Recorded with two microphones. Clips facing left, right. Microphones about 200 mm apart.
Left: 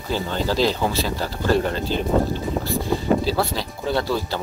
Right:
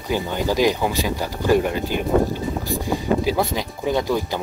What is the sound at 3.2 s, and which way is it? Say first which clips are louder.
Speech: right 2 dB; 15° right (ahead or behind).